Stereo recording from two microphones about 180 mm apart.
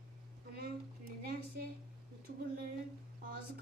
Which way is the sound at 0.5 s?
55° right (ahead or behind).